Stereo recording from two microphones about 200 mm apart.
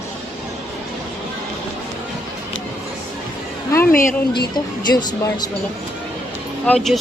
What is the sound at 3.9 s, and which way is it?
Speech, 45° left (ahead or behind).